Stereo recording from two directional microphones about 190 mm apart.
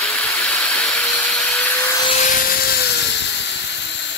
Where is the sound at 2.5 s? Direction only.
60° left (ahead or behind).